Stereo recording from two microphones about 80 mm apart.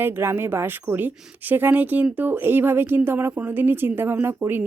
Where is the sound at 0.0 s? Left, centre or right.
Right.